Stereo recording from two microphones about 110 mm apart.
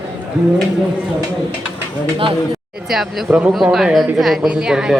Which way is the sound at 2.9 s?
Centre (ahead or behind).